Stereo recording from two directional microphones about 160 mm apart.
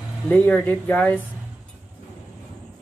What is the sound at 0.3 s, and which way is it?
Speech, 10° left (ahead or behind).